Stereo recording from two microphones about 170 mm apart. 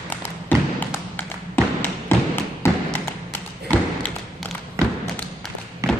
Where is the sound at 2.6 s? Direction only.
10° left (ahead or behind).